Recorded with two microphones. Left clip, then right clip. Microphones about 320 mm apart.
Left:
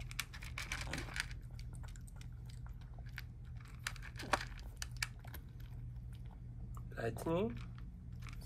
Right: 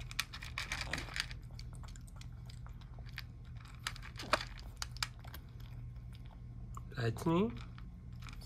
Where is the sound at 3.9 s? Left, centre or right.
Centre.